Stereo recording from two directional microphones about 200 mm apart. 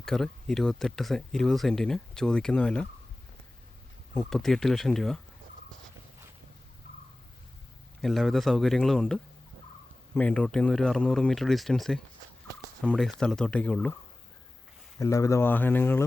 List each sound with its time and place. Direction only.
0.0 s speech: centre (ahead or behind)
4.1 s speech: centre (ahead or behind)
8.0 s speech: centre (ahead or behind)
14.9 s speech: 15° left (ahead or behind)